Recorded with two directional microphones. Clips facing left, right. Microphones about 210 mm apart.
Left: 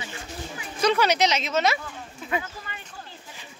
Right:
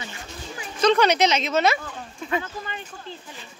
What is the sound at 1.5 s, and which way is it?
Speech, 55° right (ahead or behind).